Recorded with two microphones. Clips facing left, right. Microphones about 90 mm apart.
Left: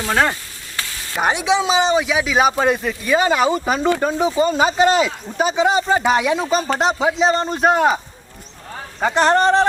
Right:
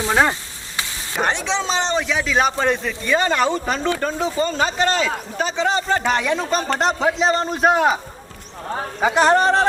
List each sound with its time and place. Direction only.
0.0 s frying: 20° right (ahead or behind)
0.8 s sizzle: 20° right (ahead or behind)
1.1 s a man's voice: 10° left (ahead or behind)
9.0 s speech: 5° right (ahead or behind)